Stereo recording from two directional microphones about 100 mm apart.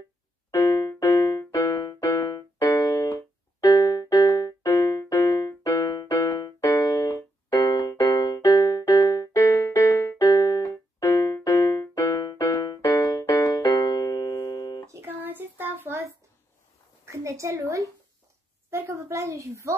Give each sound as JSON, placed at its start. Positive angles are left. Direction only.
{"t": 0.5, "sound": "music", "side_deg": 30}
{"t": 2.9, "sound": "keyboard", "side_deg": 40}
{"t": 3.6, "sound": "music", "side_deg": 40}
{"t": 6.8, "sound": "music", "side_deg": 45}
{"t": 13.2, "sound": "keyboard", "side_deg": 35}
{"t": 14.9, "sound": "a sound", "side_deg": -20}
{"t": 17.0, "sound": "a sound", "side_deg": -30}